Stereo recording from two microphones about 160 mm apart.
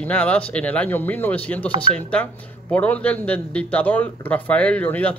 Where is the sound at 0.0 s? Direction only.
10° left (ahead or behind).